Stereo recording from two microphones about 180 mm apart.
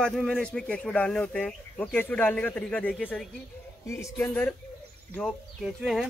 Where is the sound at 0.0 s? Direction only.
Centre (ahead or behind).